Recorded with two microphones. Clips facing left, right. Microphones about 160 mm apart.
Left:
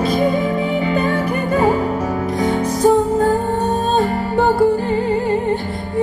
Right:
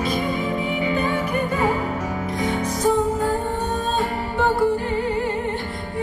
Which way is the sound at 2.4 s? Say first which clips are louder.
Left 7 dB; 35° left (ahead or behind).